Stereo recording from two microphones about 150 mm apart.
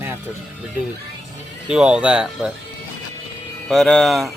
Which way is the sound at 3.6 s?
5° left (ahead or behind).